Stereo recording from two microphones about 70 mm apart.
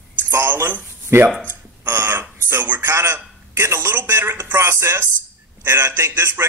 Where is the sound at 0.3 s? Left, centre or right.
Right.